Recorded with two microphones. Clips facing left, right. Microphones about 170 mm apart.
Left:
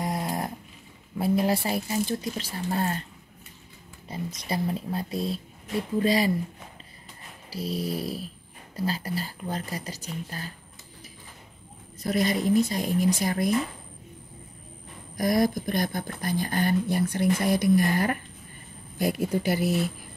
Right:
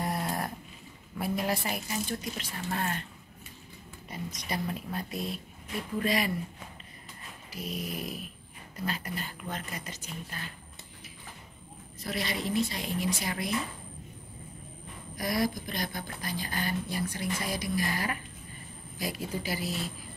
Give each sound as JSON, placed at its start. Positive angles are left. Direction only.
{"t": 0.0, "sound": "dog", "side_deg": 20}
{"t": 1.1, "sound": "speech", "side_deg": 30}
{"t": 4.1, "sound": "speech", "side_deg": 30}
{"t": 7.5, "sound": "a woman's voice", "side_deg": 30}
{"t": 12.0, "sound": "speech", "side_deg": 45}
{"t": 15.1, "sound": "speech", "side_deg": 45}